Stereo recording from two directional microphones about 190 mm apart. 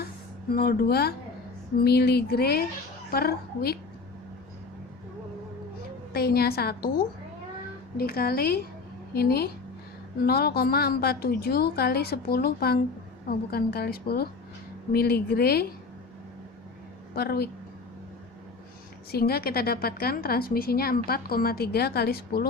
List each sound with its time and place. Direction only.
0.5 s a woman's voice: 50° left (ahead or behind)
6.1 s a woman's voice: 55° left (ahead or behind)
7.9 s a woman's voice: 50° left (ahead or behind)
17.2 s a woman's voice: 55° left (ahead or behind)
19.1 s a woman's voice: 55° left (ahead or behind)